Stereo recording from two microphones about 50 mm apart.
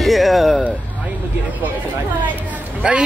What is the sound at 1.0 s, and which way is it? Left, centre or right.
Vehicle, right.